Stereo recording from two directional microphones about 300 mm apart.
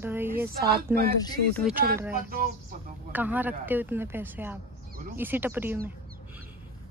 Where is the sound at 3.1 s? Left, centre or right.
Centre.